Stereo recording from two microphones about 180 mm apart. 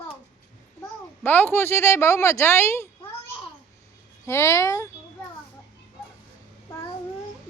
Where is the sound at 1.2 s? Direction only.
10° left (ahead or behind).